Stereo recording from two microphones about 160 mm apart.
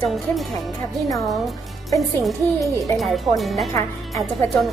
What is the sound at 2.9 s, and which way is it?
Speech, centre (ahead or behind).